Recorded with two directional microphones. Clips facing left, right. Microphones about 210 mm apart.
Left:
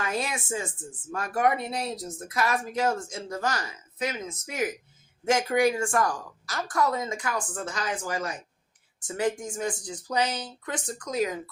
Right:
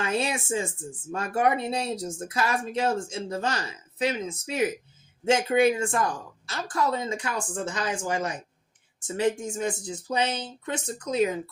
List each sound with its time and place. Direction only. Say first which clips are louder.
0.0 s speech: right 3 dB; 25° right (ahead or behind)